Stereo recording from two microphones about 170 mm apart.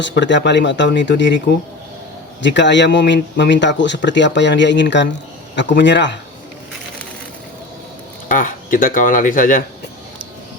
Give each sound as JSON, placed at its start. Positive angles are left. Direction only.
{"t": 0.0, "sound": "speech", "side_deg": 90}
{"t": 2.4, "sound": "speech", "side_deg": 90}
{"t": 8.3, "sound": "speech", "side_deg": 50}